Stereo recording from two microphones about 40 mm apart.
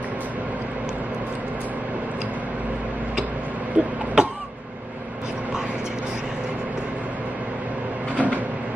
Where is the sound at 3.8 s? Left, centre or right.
Right.